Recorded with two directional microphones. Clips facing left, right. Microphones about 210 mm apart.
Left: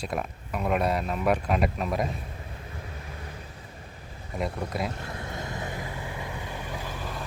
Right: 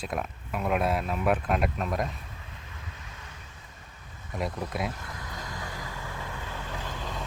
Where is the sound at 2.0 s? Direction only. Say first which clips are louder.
Left 6 dB; 35° left (ahead or behind).